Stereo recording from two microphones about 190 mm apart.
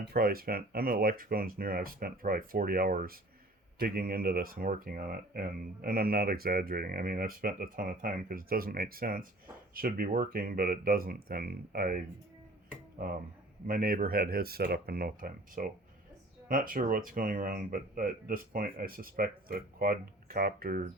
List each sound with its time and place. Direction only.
0.0 s speech: 55° right (ahead or behind)
13.7 s speech: 50° right (ahead or behind)